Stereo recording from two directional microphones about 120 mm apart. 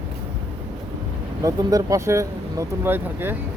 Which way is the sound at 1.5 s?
30° right (ahead or behind).